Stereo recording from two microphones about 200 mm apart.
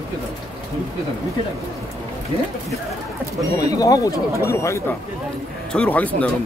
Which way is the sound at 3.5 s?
15° left (ahead or behind).